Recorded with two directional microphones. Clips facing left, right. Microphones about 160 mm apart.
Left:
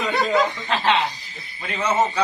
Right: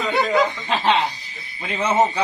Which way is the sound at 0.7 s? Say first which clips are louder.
Right 1 dB; 15° right (ahead or behind).